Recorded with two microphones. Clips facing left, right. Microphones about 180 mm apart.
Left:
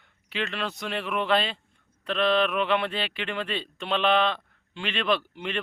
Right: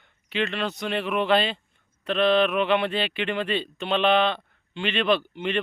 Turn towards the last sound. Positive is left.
turn(degrees=0)  # may be behind; listen again after turning